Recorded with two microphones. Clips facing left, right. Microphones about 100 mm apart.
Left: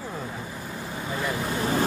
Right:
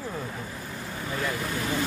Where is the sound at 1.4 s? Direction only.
30° left (ahead or behind).